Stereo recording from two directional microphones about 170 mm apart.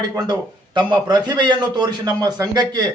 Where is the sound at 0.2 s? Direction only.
25° right (ahead or behind).